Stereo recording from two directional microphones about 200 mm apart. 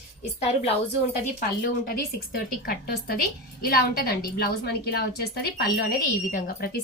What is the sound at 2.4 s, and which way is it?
A woman's voice, 50° left (ahead or behind).